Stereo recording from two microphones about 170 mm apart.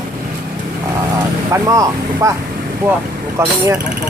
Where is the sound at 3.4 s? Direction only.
15° right (ahead or behind).